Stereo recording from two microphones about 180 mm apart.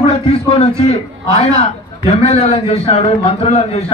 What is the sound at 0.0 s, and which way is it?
A man's voice, 35° left (ahead or behind).